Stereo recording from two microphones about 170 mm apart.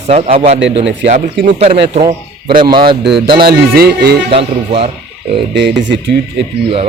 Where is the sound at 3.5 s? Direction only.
65° right (ahead or behind).